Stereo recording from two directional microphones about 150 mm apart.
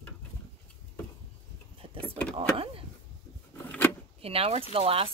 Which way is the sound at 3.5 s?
10° left (ahead or behind).